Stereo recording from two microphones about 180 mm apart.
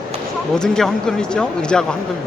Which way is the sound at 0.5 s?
5° left (ahead or behind).